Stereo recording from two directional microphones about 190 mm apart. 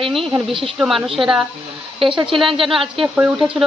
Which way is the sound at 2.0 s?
25° right (ahead or behind).